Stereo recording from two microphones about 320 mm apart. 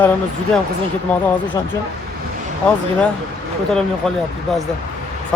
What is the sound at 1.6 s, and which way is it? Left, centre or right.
Speech, centre.